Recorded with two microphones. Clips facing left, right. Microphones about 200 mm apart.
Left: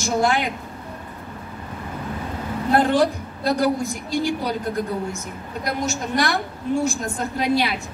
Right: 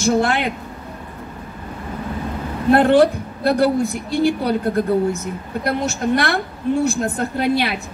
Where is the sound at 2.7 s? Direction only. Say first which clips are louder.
Right 5 dB; 60° right (ahead or behind).